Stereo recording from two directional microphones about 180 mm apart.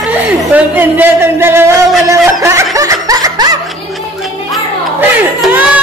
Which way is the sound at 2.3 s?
15° right (ahead or behind).